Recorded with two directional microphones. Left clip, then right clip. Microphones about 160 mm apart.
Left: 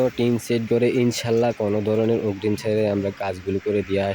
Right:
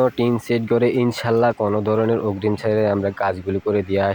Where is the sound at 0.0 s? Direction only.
5° left (ahead or behind).